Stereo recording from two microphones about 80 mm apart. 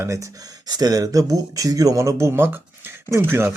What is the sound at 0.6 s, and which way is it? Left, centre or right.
Speech, right.